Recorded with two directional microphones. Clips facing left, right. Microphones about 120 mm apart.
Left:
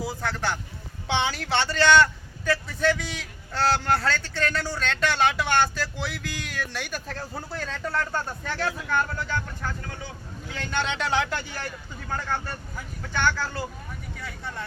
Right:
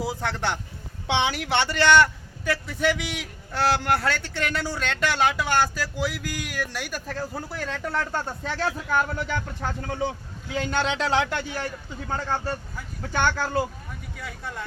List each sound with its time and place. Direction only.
0.0 s a man's voice: 20° right (ahead or behind)
10.5 s a man's voice: 10° right (ahead or behind)
11.1 s speech: 25° right (ahead or behind)
13.1 s speech: 45° right (ahead or behind)
14.2 s speech: 10° right (ahead or behind)